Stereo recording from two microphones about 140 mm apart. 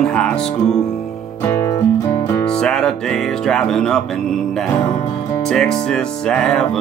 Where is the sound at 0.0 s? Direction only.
5° left (ahead or behind).